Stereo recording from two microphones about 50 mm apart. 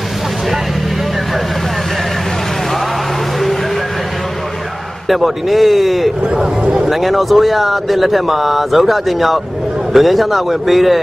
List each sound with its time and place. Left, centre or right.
5.0 s speech: centre
6.2 s speech: centre
6.9 s speech: centre